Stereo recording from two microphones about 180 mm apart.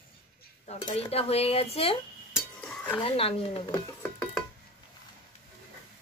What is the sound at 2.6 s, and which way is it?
Cutlery, 10° left (ahead or behind).